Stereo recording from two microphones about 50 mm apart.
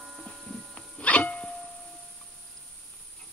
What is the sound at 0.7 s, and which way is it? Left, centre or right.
Music, left.